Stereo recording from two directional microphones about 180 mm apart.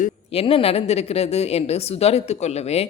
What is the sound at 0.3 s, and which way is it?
A woman's voice, 30° left (ahead or behind).